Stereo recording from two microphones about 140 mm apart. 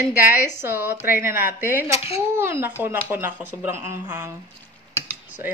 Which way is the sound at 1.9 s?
45° left (ahead or behind).